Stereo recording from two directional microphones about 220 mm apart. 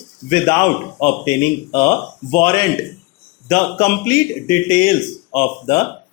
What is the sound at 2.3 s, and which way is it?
Speech, 15° left (ahead or behind).